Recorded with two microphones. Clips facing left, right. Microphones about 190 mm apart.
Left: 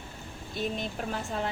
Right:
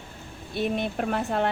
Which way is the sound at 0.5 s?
65° right (ahead or behind).